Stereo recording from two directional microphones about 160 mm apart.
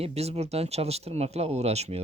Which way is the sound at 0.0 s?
40° right (ahead or behind).